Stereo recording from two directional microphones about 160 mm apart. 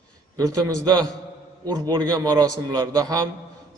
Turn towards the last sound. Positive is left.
turn(degrees=-25)  # may be behind; listen again after turning